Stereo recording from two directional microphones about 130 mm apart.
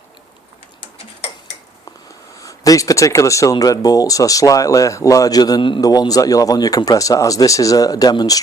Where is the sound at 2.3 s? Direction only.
25° left (ahead or behind).